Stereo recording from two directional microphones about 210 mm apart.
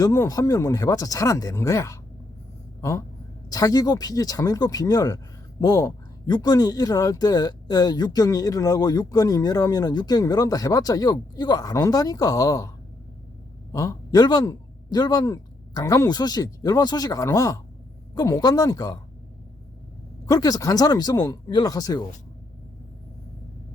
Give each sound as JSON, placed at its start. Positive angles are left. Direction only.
{"t": 0.0, "sound": "speech", "side_deg": 15}
{"t": 3.5, "sound": "speech", "side_deg": 15}
{"t": 13.7, "sound": "speech", "side_deg": 15}
{"t": 20.2, "sound": "speech", "side_deg": 20}